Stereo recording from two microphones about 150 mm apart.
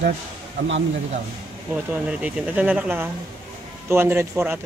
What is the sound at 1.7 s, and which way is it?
Speech, 10° right (ahead or behind).